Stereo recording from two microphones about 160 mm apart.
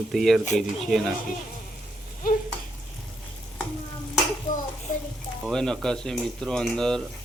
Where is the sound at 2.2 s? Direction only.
65° left (ahead or behind).